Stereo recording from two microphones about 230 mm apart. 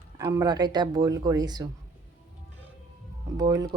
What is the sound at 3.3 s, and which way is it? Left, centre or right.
Speech, centre.